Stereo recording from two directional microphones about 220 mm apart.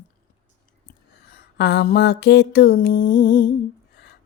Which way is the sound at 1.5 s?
50° left (ahead or behind).